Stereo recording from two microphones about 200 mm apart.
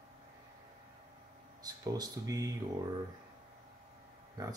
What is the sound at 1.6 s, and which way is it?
Speech, 20° right (ahead or behind).